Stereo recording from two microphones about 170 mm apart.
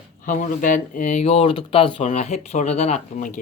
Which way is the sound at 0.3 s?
50° left (ahead or behind).